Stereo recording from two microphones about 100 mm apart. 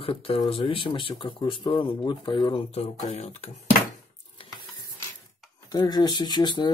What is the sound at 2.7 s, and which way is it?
Speech, 90° left.